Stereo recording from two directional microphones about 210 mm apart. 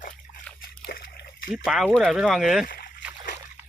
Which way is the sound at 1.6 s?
5° right (ahead or behind).